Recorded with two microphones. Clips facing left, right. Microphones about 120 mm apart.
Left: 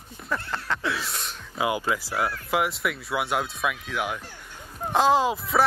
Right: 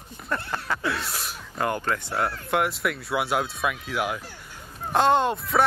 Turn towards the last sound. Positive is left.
turn(degrees=0)  # may be behind; listen again after turning